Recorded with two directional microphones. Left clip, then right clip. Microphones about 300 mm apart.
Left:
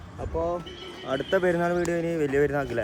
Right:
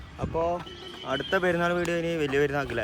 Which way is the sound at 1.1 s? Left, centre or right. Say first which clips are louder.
Left 2 dB; centre.